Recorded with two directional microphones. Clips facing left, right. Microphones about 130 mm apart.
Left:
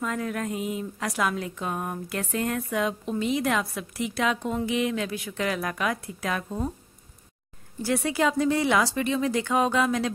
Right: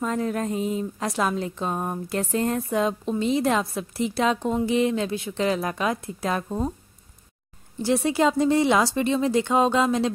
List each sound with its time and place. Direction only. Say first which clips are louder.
0.0 s a woman's voice: right 4 dB; 30° right (ahead or behind)
7.8 s speech: right 4 dB; 25° right (ahead or behind)